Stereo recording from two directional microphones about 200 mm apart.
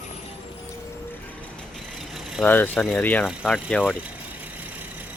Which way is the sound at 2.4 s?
10° left (ahead or behind).